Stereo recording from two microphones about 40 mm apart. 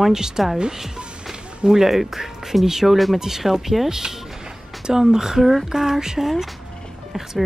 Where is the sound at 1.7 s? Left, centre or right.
Centre.